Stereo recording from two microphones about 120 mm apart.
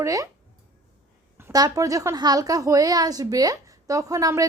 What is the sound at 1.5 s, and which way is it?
Speech, 30° right (ahead or behind).